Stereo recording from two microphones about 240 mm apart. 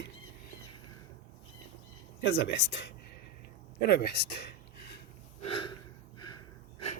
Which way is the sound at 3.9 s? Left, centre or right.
Left.